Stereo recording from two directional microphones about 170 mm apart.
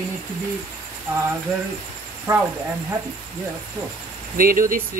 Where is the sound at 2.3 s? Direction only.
20° right (ahead or behind).